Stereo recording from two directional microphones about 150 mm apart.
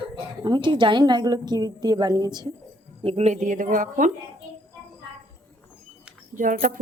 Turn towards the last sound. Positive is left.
turn(degrees=-60)  # may be behind; listen again after turning